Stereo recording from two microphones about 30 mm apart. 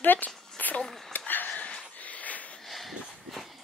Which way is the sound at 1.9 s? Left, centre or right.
Left.